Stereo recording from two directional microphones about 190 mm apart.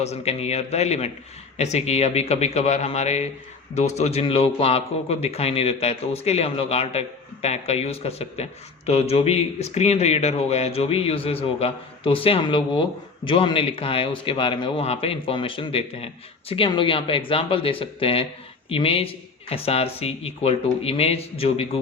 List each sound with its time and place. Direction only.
0.0 s speech: 35° left (ahead or behind)